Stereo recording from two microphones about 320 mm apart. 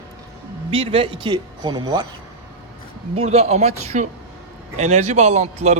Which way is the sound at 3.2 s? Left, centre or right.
Centre.